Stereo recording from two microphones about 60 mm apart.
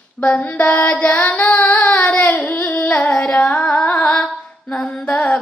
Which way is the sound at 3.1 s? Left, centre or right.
Centre.